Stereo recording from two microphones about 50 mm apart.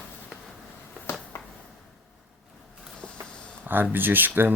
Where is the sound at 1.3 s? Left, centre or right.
Left.